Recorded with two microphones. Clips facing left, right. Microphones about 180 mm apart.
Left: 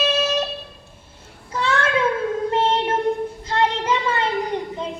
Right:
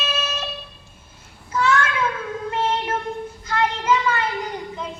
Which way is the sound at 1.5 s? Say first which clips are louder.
Even; 35° left (ahead or behind).